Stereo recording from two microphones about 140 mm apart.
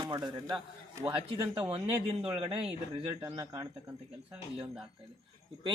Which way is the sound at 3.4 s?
25° right (ahead or behind).